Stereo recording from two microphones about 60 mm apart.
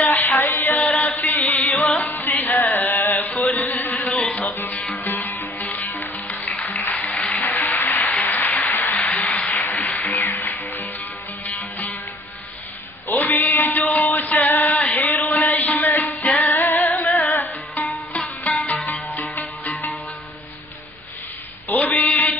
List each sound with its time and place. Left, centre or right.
0.0 s music: left
0.8 s chant: left
2.0 s music: left
3.5 s a sound: left
4.4 s music: left
7.2 s a sound: left
9.8 s music: left
13.1 s music: left
21.6 s a sound: left